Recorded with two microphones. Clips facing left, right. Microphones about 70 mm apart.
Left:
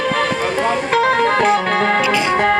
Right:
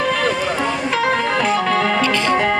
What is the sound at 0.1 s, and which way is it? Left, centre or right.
Music, left.